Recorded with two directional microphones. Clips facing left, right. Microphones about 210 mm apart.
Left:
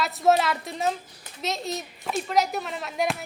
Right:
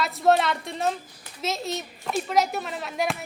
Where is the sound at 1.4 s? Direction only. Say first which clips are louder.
Right 1 dB; centre (ahead or behind).